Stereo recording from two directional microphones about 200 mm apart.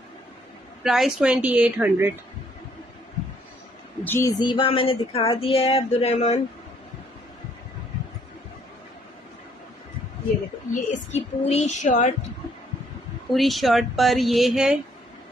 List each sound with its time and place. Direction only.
0.8 s speech: centre (ahead or behind)
4.0 s speech: 10° left (ahead or behind); by 6.4 s 35° left (ahead or behind)
10.7 s a woman's voice: 35° left (ahead or behind)
13.3 s speech: centre (ahead or behind)